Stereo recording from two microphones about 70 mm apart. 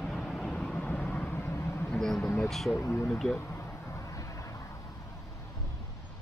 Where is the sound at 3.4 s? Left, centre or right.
Left.